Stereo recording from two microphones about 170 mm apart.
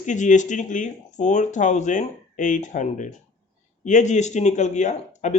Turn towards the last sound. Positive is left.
turn(degrees=45)  # may be behind; listen again after turning